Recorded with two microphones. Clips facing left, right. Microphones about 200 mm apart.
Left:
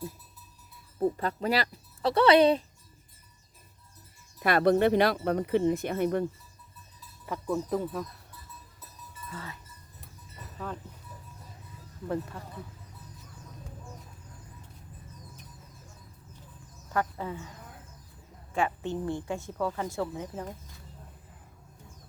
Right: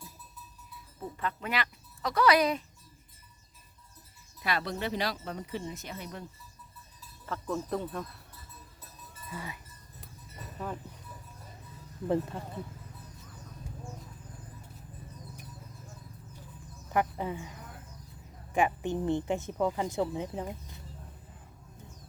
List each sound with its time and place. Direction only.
1.1 s speech: 35° left (ahead or behind)
4.4 s speech: 55° left (ahead or behind)
7.3 s speech: 10° left (ahead or behind)
9.3 s speech: 15° right (ahead or behind)
12.0 s speech: 25° right (ahead or behind)
16.9 s speech: 15° right (ahead or behind)
18.5 s speech: 15° right (ahead or behind)